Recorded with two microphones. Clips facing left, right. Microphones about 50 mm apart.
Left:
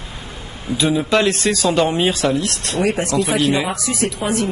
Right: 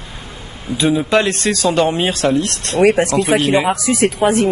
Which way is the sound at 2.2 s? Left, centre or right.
Centre.